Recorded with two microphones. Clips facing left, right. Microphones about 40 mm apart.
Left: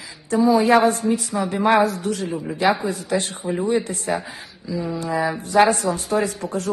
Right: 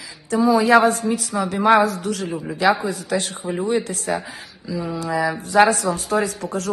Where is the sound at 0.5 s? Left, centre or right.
Right.